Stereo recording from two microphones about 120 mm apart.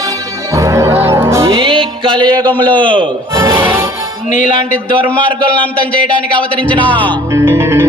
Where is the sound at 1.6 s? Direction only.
45° right (ahead or behind).